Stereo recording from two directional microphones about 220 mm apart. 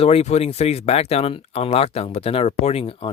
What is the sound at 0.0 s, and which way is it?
Speech, 30° left (ahead or behind).